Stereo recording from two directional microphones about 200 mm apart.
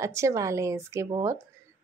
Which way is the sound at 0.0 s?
15° right (ahead or behind).